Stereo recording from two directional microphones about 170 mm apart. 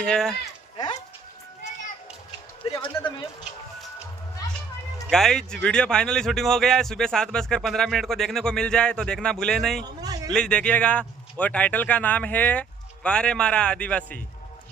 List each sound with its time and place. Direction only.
0.0 s speech: 5° left (ahead or behind)
2.6 s speech: 35° left (ahead or behind)
5.1 s speech: 5° left (ahead or behind)